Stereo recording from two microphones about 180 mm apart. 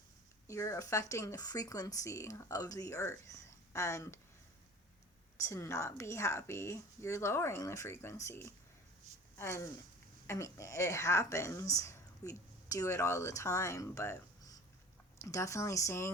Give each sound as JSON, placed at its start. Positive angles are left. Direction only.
{"t": 0.4, "sound": "speech", "side_deg": 15}
{"t": 5.4, "sound": "speech", "side_deg": 15}
{"t": 9.1, "sound": "a sound", "side_deg": -40}
{"t": 9.4, "sound": "speech", "side_deg": 15}